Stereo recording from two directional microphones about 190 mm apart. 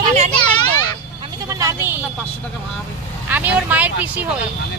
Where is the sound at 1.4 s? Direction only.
15° right (ahead or behind).